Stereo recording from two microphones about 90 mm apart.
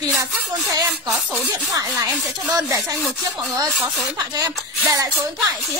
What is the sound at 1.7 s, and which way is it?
Speech, 40° right (ahead or behind).